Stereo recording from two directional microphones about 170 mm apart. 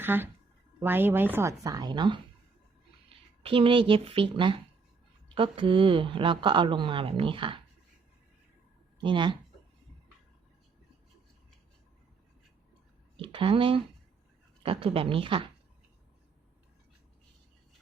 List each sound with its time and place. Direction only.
0.0 s a woman's voice: 10° right (ahead or behind); by 2.2 s 25° right (ahead or behind)
3.4 s a woman's voice: 30° right (ahead or behind)
9.0 s speech: 25° right (ahead or behind)
13.1 s a woman's voice: 30° right (ahead or behind)